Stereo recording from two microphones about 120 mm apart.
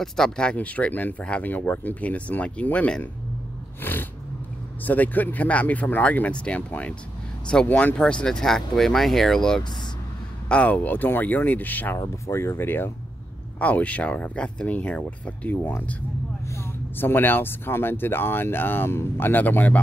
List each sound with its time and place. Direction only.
0.0 s speech: 5° left (ahead or behind)